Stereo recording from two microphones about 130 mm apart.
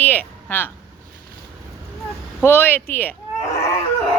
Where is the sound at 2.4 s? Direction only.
15° left (ahead or behind).